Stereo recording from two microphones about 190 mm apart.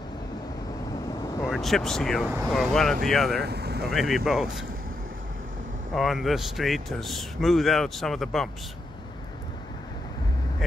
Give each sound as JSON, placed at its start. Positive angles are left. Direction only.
{"t": 1.5, "sound": "speech", "side_deg": 0}
{"t": 3.4, "sound": "vehicle", "side_deg": -60}
{"t": 3.9, "sound": "speech", "side_deg": 0}
{"t": 5.9, "sound": "speech", "side_deg": 0}